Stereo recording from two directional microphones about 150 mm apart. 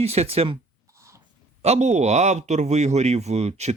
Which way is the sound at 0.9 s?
20° right (ahead or behind).